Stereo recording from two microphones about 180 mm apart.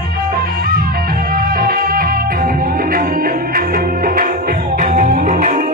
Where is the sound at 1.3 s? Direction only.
55° right (ahead or behind).